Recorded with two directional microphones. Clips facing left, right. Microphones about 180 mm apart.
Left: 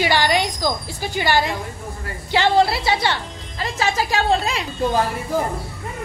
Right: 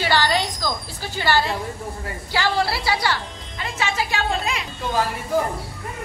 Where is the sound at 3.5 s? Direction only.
35° left (ahead or behind).